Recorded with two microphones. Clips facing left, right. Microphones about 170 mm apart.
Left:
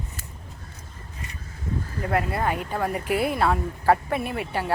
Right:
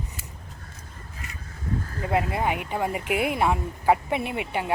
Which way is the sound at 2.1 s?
15° right (ahead or behind).